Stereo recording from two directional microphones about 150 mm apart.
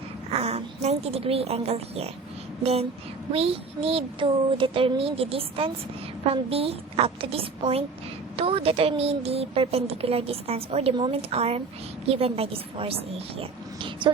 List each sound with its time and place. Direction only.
0.3 s a woman's voice: 45° right (ahead or behind)
3.3 s a woman's voice: 40° right (ahead or behind)
10.9 s a woman's voice: 30° right (ahead or behind)
11.2 s a woman's voice: 45° right (ahead or behind)